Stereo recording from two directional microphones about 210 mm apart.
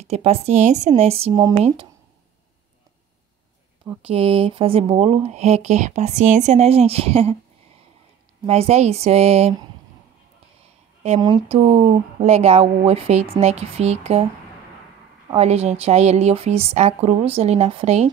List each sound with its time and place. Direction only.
0.0 s a woman's voice: 30° right (ahead or behind)
4.0 s speech: 25° right (ahead or behind)
8.5 s a woman's voice: 30° right (ahead or behind)
11.1 s a woman's voice: 20° right (ahead or behind)
15.3 s a woman's voice: 30° right (ahead or behind)